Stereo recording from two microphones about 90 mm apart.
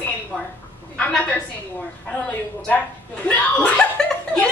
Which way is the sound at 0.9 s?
15° left (ahead or behind).